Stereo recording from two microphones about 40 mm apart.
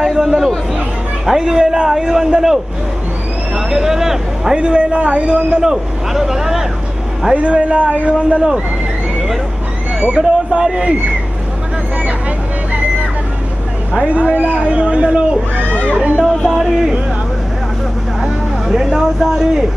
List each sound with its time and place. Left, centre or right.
0.0 s chatter: centre
0.7 s speech: centre
4.6 s a man's voice: right; by 6.6 s centre
7.3 s a man's voice: right
9.9 s a man's voice: right
14.0 s a man's voice: right
16.4 s speech: centre
18.2 s vehicle: centre
18.9 s speech: centre